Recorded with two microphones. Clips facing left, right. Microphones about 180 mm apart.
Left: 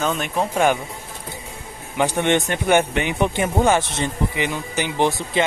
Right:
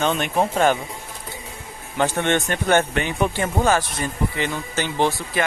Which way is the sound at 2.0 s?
15° left (ahead or behind).